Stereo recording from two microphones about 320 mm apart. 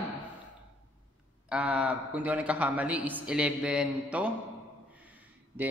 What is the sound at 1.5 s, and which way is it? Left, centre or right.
Speech, centre.